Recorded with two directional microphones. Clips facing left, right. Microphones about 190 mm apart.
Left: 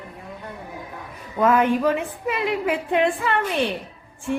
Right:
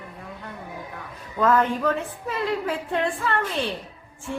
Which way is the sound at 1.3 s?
15° left (ahead or behind).